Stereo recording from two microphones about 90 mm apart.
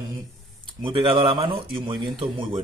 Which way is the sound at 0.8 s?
70° right (ahead or behind).